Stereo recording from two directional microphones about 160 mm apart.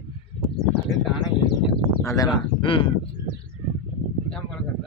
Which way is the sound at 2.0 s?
20° left (ahead or behind).